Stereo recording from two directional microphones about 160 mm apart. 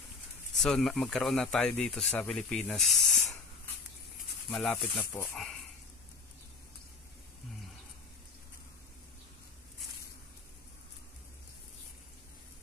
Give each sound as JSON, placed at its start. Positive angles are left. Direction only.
{"t": 0.6, "sound": "speech", "side_deg": 0}
{"t": 4.5, "sound": "speech", "side_deg": 5}
{"t": 5.1, "sound": "speech", "side_deg": 15}